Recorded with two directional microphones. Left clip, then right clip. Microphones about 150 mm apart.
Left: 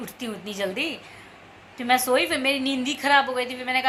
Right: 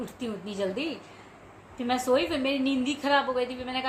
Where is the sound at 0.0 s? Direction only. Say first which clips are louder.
Left 2 dB; 10° left (ahead or behind).